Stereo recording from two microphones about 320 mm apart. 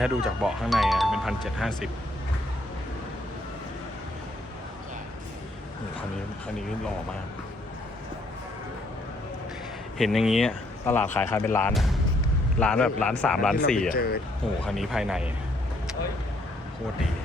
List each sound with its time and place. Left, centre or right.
0.0 s speech: centre
10.0 s speech: centre
13.9 s speech: left
14.6 s speech: centre